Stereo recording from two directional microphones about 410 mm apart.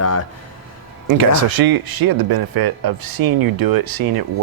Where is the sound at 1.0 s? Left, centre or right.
Right.